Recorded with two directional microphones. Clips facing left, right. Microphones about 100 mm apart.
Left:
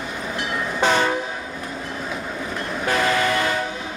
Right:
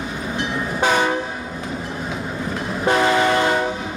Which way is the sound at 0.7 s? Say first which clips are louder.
Right 1 dB; 10° right (ahead or behind).